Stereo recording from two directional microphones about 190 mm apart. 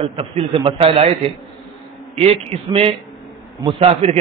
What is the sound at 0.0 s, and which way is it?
A man's voice, 30° right (ahead or behind).